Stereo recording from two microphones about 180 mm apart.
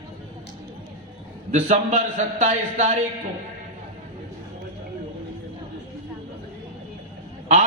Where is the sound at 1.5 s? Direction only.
40° right (ahead or behind).